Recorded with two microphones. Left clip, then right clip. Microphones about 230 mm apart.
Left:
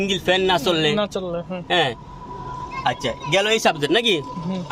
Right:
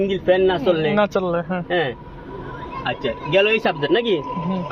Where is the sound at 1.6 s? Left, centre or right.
Left.